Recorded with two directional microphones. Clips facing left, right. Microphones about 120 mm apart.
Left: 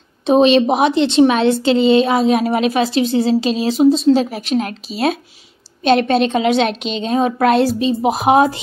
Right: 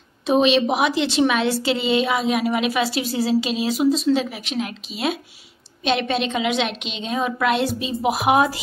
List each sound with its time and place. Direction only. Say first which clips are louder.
0.3 s speech: left 6 dB; 35° left (ahead or behind)
4.3 s speech: left 8 dB; 40° left (ahead or behind)